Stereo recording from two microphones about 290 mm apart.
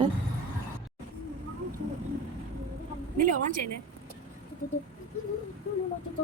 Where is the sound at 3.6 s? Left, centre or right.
Right.